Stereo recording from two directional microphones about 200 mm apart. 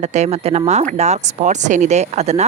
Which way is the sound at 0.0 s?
35° right (ahead or behind).